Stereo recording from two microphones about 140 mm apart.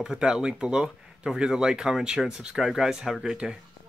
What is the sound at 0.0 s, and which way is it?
Speech, 5° right (ahead or behind).